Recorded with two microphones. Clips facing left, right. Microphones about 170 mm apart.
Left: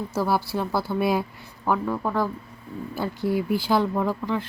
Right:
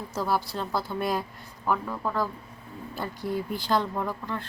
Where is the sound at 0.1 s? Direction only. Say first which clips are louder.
Left 3 dB; 5° left (ahead or behind).